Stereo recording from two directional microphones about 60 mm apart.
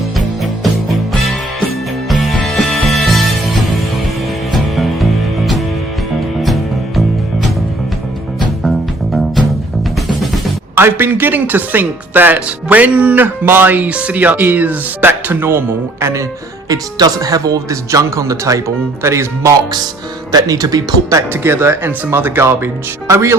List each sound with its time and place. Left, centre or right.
2.0 s music: centre
4.5 s music: centre
6.4 s music: centre
10.8 s speech: right
13.1 s speech: right
16.6 s speech: right
19.0 s speech: right
20.3 s speech: right
21.4 s speech: right
23.0 s speech: right